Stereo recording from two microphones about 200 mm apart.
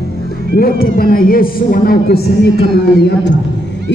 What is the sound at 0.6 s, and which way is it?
A man's voice, 50° left (ahead or behind).